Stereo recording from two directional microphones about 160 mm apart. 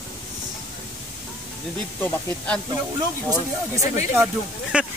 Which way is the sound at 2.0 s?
10° left (ahead or behind).